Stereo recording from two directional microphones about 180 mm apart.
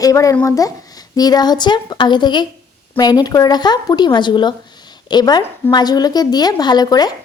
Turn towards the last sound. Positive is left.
turn(degrees=20)  # may be behind; listen again after turning